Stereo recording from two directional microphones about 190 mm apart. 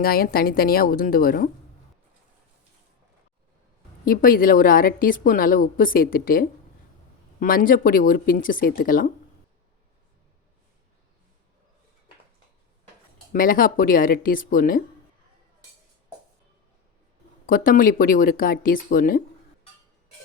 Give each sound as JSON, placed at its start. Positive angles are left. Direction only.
{"t": 0.0, "sound": "a woman's voice", "side_deg": 50}
{"t": 4.0, "sound": "a woman's voice", "side_deg": 50}
{"t": 13.3, "sound": "a woman's voice", "side_deg": 45}
{"t": 17.4, "sound": "a woman's voice", "side_deg": 45}